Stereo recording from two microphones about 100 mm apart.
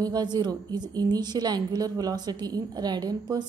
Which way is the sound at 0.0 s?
40° right (ahead or behind).